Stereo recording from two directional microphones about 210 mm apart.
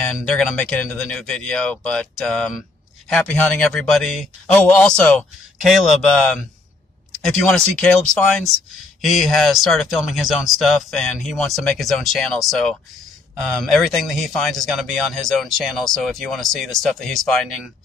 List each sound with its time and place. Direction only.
0.0 s speech: centre (ahead or behind)
9.0 s speech: centre (ahead or behind)